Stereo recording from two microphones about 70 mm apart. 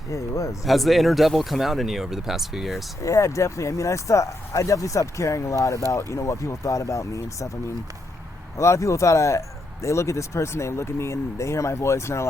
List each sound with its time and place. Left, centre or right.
0.1 s speech: left
0.6 s speech: centre
3.0 s speech: left
8.5 s speech: left